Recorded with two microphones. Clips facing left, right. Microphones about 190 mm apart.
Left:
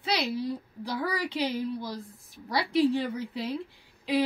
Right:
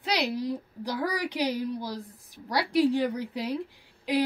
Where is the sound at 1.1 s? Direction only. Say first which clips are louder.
Right 1 dB; 15° right (ahead or behind).